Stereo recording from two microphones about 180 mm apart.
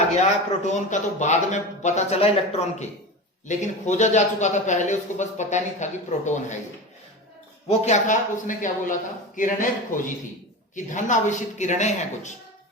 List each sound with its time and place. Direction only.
0.2 s speech: 40° left (ahead or behind)
7.7 s a man's voice: 40° left (ahead or behind)